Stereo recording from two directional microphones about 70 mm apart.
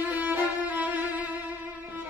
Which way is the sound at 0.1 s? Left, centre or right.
Right.